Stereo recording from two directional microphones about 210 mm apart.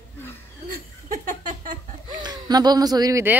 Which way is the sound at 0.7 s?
40° right (ahead or behind).